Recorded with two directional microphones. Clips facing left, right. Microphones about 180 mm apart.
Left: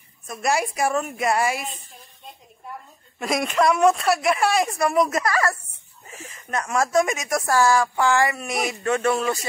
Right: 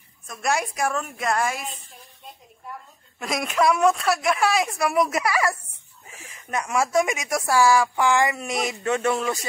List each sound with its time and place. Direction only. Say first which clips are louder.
0.4 s a woman's voice: left 2 dB; 5° left (ahead or behind)
3.2 s a woman's voice: left 2 dB; centre (ahead or behind); by 9.2 s 15° right (ahead or behind)